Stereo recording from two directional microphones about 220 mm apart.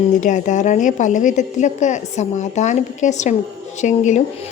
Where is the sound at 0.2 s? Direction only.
35° left (ahead or behind).